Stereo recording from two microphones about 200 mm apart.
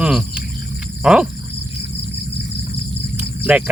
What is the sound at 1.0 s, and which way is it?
Wild animals, 5° right (ahead or behind).